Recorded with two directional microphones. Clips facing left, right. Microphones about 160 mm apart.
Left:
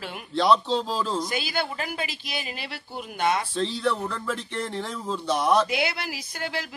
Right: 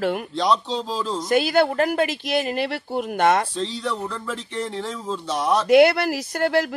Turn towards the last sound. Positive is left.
turn(degrees=-55)  # may be behind; listen again after turning